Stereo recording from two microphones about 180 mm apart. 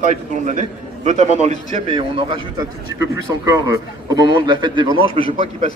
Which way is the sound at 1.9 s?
25° right (ahead or behind).